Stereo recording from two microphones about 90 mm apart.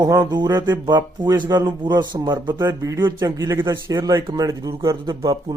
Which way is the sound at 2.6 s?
30° right (ahead or behind).